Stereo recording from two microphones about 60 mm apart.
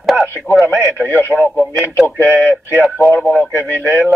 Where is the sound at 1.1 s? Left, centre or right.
Left.